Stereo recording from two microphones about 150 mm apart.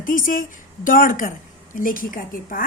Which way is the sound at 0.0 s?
65° left (ahead or behind).